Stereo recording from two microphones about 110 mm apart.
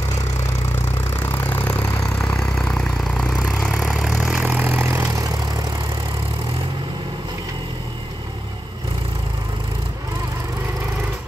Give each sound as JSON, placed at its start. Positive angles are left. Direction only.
{"t": 1.1, "sound": "vehicle", "side_deg": 20}
{"t": 2.5, "sound": "vehicle", "side_deg": 5}
{"t": 4.5, "sound": "vehicle", "side_deg": -15}